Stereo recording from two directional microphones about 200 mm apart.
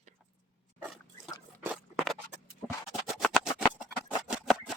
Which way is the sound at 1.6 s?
Centre (ahead or behind).